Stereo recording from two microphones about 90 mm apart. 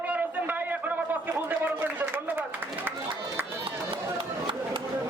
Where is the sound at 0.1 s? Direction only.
20° right (ahead or behind).